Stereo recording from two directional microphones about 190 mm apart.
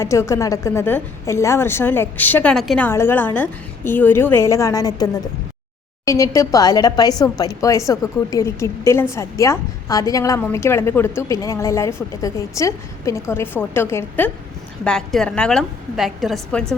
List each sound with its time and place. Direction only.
0.0 s a woman's voice: 15° left (ahead or behind)
6.1 s a woman's voice: 15° left (ahead or behind)